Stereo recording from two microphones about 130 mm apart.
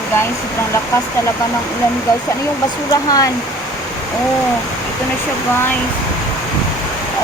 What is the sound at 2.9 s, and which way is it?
Speech, 30° left (ahead or behind).